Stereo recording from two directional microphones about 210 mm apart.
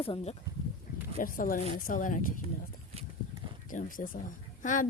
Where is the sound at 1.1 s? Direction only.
40° left (ahead or behind).